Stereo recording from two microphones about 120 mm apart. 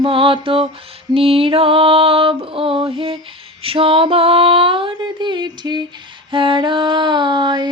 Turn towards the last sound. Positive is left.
turn(degrees=-40)  # may be behind; listen again after turning